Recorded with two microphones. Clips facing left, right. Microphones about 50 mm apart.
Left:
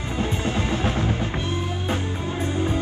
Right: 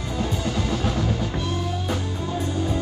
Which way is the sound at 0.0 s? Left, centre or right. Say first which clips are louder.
Left 1 dB; left.